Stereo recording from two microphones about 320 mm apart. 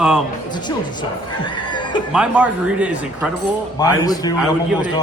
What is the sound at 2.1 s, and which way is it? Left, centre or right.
Speech, centre.